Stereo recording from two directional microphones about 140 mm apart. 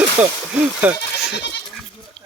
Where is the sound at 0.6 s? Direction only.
5° right (ahead or behind).